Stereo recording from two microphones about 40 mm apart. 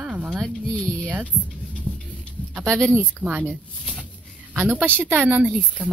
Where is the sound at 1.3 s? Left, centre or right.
Left.